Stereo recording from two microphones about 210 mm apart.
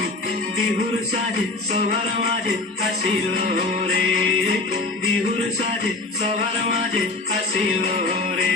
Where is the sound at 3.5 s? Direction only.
45° right (ahead or behind).